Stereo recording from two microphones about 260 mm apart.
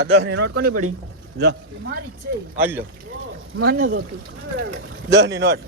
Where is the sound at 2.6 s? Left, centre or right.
Centre.